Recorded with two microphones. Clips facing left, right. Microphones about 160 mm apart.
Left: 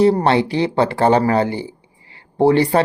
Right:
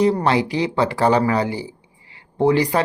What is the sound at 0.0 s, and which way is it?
Speech, 35° left (ahead or behind).